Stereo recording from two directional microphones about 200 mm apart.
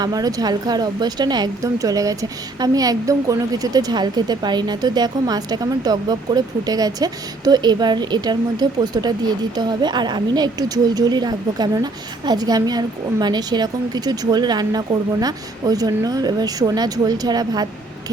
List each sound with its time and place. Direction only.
0.0 s speech: 20° right (ahead or behind)